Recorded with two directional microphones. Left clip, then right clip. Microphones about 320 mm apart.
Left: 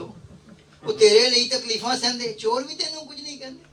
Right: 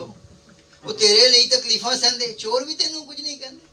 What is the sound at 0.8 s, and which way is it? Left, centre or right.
A man's voice, left.